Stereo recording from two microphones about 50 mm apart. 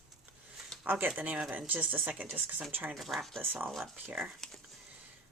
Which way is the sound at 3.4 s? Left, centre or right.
Right.